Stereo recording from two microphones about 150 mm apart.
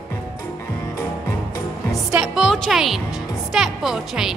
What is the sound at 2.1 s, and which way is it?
Speech, 5° right (ahead or behind).